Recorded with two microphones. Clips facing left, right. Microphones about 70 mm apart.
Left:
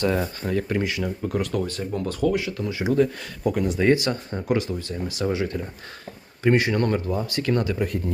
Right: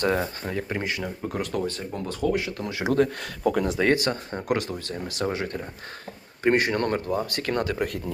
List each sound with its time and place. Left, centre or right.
0.0 s speech: right
0.4 s speech: right
0.9 s speech: right
2.6 s speech: right
3.9 s speech: right
5.2 s speech: right